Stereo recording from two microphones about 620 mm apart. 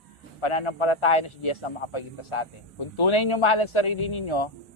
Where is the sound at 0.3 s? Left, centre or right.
Left.